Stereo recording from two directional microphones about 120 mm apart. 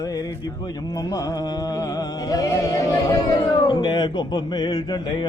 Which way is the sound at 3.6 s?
40° left (ahead or behind).